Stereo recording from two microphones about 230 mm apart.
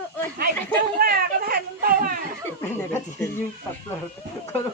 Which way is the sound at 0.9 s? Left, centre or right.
Right.